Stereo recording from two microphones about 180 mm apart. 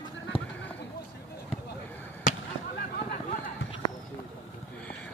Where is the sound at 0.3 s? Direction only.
30° left (ahead or behind).